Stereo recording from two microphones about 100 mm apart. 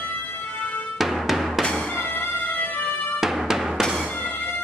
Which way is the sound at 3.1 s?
5° right (ahead or behind).